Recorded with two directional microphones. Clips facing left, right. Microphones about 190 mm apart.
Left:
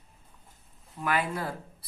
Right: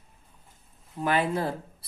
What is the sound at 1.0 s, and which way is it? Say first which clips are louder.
Speech: right 4 dB; 25° right (ahead or behind).